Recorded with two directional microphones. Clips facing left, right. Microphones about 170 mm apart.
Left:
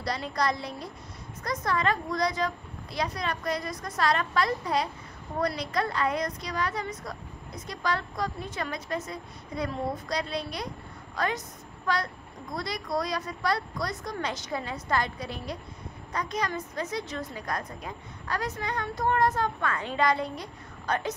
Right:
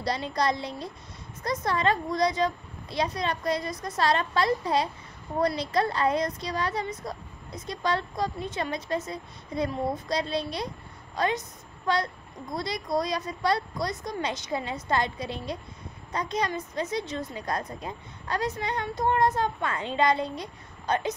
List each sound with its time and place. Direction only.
0.0 s a woman's voice: 25° right (ahead or behind)